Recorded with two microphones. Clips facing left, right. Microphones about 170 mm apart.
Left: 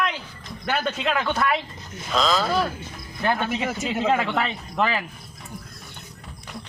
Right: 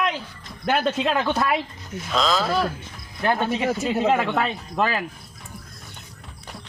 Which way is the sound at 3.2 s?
15° right (ahead or behind).